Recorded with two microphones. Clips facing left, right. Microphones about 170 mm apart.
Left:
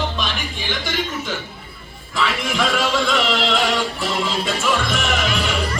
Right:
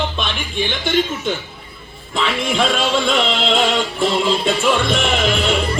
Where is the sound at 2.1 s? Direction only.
25° right (ahead or behind).